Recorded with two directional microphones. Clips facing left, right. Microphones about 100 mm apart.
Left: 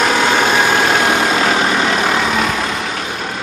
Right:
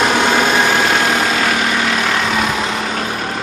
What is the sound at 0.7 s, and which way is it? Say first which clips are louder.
Vehicle: left 1 dB; 10° left (ahead or behind).